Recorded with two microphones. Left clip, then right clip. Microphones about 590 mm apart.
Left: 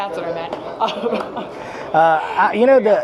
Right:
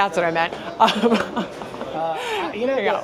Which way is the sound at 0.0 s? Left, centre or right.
Right.